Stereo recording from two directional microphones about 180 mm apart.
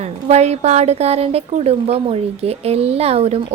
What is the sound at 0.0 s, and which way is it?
A woman's voice, 40° right (ahead or behind).